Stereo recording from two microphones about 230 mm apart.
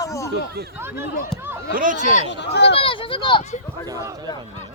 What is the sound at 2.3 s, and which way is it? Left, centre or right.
Speech, left.